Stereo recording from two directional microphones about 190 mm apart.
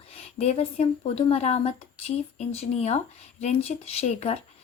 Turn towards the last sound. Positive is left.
turn(degrees=35)  # may be behind; listen again after turning